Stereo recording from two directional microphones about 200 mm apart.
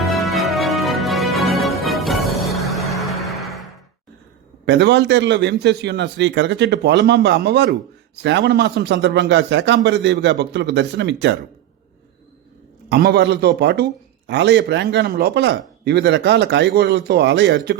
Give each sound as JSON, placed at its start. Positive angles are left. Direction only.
{"t": 0.0, "sound": "music", "side_deg": 0}
{"t": 4.6, "sound": "a man's voice", "side_deg": -60}
{"t": 12.9, "sound": "a man's voice", "side_deg": -55}